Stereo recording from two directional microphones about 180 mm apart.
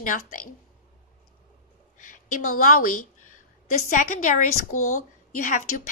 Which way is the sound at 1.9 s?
45° left (ahead or behind).